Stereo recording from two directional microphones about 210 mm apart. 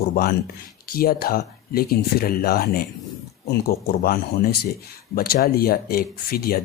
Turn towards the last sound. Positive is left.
turn(degrees=45)  # may be behind; listen again after turning